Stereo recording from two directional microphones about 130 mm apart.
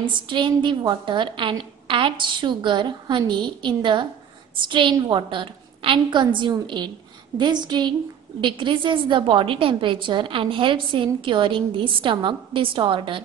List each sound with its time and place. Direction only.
0.0 s a woman's voice: 40° right (ahead or behind)